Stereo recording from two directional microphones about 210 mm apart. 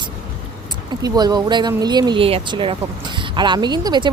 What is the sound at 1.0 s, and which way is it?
Speech, 20° right (ahead or behind).